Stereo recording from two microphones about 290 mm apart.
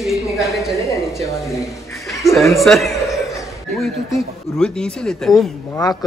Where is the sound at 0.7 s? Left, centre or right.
Centre.